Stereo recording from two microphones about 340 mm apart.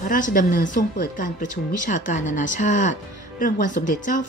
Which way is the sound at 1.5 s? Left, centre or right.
Left.